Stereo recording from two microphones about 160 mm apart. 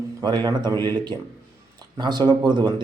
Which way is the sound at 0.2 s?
25° right (ahead or behind).